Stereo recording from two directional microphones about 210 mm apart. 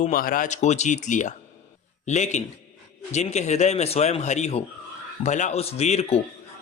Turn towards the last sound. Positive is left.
turn(degrees=30)  # may be behind; listen again after turning